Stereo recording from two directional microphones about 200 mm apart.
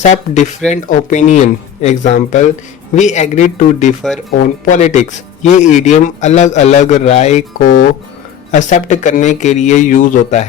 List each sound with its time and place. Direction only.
0.0 s speech: 35° left (ahead or behind)